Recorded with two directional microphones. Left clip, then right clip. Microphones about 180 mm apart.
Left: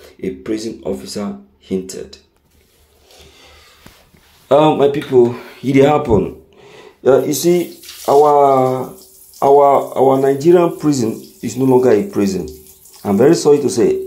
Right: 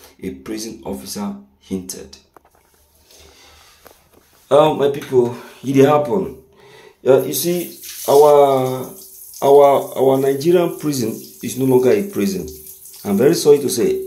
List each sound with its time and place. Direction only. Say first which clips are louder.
0.2 s speech: left 6 dB; 15° left (ahead or behind)
4.5 s speech: left 2 dB; 25° left (ahead or behind)
6.6 s a sound: left 6 dB; 20° left (ahead or behind)
8.0 s speech: even; 5° left (ahead or behind)